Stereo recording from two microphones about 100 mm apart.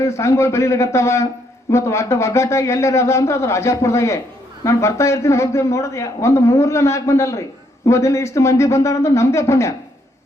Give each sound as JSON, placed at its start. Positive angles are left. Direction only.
{"t": 0.0, "sound": "a man's voice", "side_deg": 30}